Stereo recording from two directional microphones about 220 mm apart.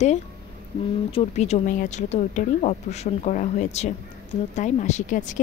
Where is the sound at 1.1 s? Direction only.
30° left (ahead or behind).